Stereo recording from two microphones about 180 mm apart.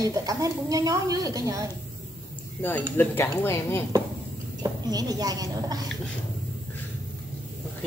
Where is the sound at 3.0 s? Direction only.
10° left (ahead or behind).